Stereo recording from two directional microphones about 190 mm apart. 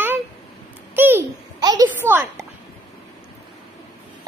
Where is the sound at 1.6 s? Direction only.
20° right (ahead or behind).